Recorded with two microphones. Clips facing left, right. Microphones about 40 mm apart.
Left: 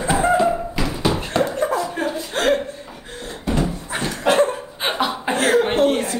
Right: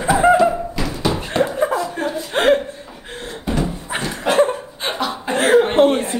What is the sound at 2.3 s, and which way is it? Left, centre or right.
Chuckle, right.